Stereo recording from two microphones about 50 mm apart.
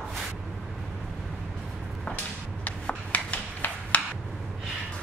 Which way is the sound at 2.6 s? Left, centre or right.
Left.